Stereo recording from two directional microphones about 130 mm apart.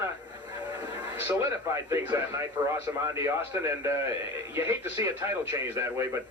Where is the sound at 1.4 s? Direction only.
20° right (ahead or behind).